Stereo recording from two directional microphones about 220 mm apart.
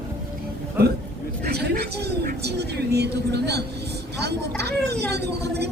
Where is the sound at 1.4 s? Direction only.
45° right (ahead or behind).